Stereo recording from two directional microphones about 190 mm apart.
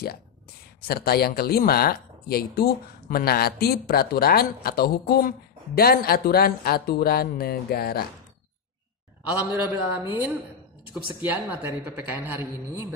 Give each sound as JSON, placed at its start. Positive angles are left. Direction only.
{"t": 0.8, "sound": "speech", "side_deg": 55}
{"t": 9.7, "sound": "a man's voice", "side_deg": -10}